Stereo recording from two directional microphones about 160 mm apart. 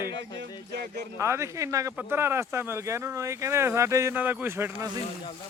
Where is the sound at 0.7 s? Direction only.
90° right.